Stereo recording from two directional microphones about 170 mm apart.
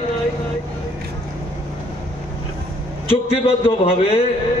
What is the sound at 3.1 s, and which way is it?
A man's voice, 35° left (ahead or behind).